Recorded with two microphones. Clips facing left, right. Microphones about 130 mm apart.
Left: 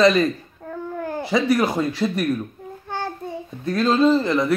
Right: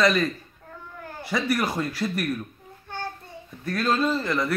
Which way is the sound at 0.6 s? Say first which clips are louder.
Left 13 dB; 50° left (ahead or behind).